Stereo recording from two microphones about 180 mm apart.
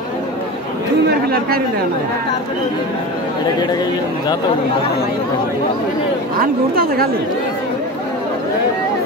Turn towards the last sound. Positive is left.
turn(degrees=-55)  # may be behind; listen again after turning